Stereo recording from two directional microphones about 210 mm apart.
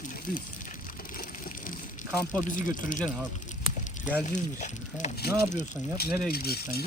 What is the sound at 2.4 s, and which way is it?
Speech, 40° left (ahead or behind).